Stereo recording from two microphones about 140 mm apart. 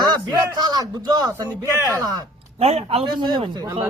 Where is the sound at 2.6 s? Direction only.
50° right (ahead or behind); by 3.8 s 30° right (ahead or behind).